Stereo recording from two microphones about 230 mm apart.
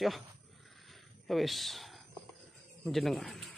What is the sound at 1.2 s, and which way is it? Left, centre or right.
Speech, centre.